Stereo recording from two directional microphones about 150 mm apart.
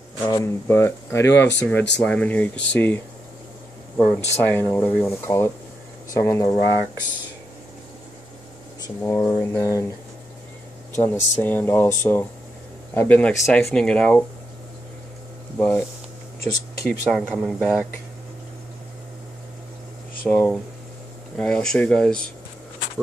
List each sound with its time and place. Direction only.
0.3 s speech: 20° left (ahead or behind); by 4.2 s centre (ahead or behind)
4.4 s speech: 15° left (ahead or behind)
9.0 s speech: 15° left (ahead or behind)
11.0 s speech: 15° left (ahead or behind)
15.5 s speech: 10° left (ahead or behind)
16.8 s speech: centre (ahead or behind)
20.2 s speech: 10° left (ahead or behind)